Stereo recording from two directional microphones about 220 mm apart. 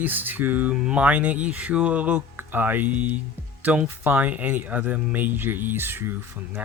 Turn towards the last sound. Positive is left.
turn(degrees=-10)  # may be behind; listen again after turning